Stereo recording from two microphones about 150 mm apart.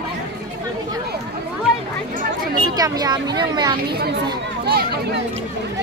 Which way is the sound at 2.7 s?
25° right (ahead or behind).